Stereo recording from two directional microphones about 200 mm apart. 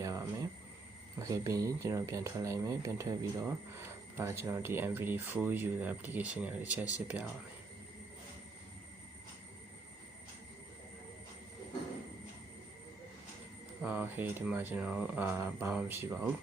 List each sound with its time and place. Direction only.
0.0 s a sound: 15° right (ahead or behind)
1.2 s speech: 15° right (ahead or behind)
13.8 s speech: 10° right (ahead or behind)